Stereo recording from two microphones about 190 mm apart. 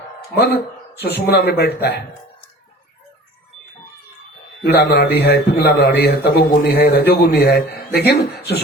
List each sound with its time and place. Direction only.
0.3 s a man's voice: 60° left (ahead or behind)
4.6 s a man's voice: 55° left (ahead or behind)